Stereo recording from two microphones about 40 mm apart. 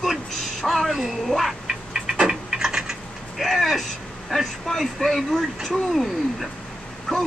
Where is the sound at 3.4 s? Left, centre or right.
Centre.